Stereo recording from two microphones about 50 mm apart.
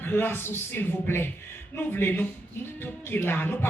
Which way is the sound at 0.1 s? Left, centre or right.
Left.